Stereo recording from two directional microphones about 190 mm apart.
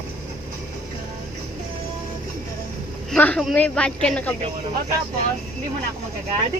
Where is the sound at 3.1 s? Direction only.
5° left (ahead or behind).